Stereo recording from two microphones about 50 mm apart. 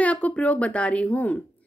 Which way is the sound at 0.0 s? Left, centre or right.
Left.